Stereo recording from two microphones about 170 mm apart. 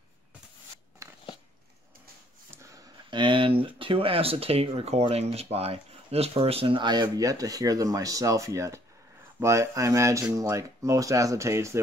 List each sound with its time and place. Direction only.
1.0 s a sound: 20° right (ahead or behind)
2.5 s dog: 15° right (ahead or behind)
3.1 s speech: 30° right (ahead or behind)